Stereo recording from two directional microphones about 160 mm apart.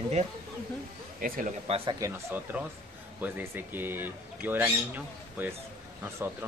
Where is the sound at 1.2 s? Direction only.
60° right (ahead or behind).